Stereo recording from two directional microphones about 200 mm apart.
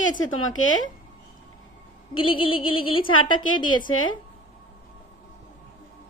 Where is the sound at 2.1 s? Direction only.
25° left (ahead or behind).